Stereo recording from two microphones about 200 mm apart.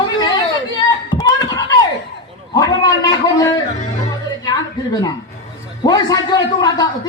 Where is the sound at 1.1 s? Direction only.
20° left (ahead or behind).